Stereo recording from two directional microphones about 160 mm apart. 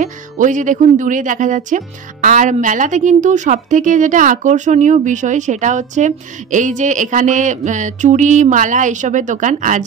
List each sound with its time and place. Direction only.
0.0 s speech: 50° right (ahead or behind)